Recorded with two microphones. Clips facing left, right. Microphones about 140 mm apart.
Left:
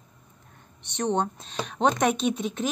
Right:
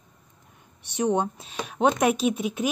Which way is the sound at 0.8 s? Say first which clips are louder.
Right 2 dB; 10° right (ahead or behind).